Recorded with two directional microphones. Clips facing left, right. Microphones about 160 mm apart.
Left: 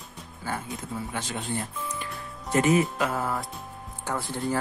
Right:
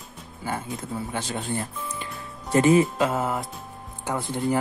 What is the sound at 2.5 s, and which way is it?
Speech, 30° right (ahead or behind).